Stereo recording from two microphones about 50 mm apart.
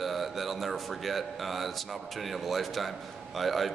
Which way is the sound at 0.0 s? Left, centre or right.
Centre.